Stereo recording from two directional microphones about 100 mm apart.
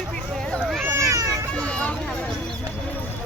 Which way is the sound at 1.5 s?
10° left (ahead or behind).